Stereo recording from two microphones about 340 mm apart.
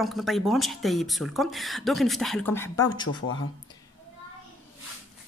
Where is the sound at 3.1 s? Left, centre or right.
Left.